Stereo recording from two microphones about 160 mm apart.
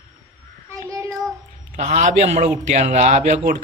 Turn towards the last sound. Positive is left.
turn(degrees=-45)  # may be behind; listen again after turning